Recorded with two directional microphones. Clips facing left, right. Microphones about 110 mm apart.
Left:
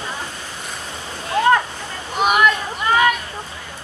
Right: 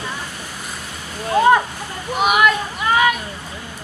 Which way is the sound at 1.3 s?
20° right (ahead or behind).